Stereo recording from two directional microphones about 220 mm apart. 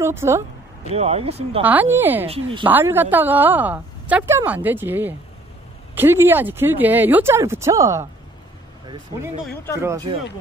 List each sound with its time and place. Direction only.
0.0 s a woman's voice: 10° right (ahead or behind)
0.9 s speech: 30° right (ahead or behind)
1.6 s a woman's voice: 10° right (ahead or behind)
2.2 s speech: 25° right (ahead or behind)
2.6 s a woman's voice: 10° right (ahead or behind)